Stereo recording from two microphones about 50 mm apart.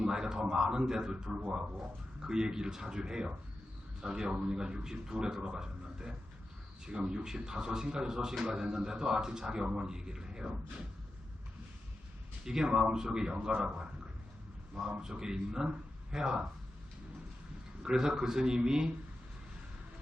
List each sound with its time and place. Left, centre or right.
0.0 s a sound: centre
2.2 s speech: centre
12.5 s a man's voice: centre
14.8 s speech: centre
17.8 s speech: centre